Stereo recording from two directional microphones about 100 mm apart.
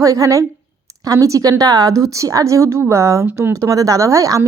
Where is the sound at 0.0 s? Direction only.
35° right (ahead or behind).